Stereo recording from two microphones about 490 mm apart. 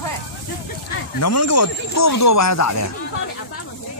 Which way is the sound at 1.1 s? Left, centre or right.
Left.